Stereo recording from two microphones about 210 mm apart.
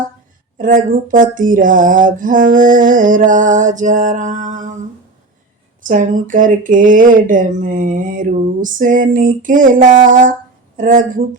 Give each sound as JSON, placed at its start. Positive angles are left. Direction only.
{"t": 0.6, "sound": "speech", "side_deg": -40}
{"t": 5.9, "sound": "speech", "side_deg": -40}